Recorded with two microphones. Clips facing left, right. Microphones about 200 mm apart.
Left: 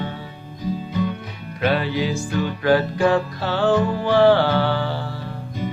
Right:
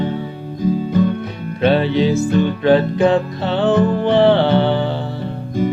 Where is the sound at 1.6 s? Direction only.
25° right (ahead or behind).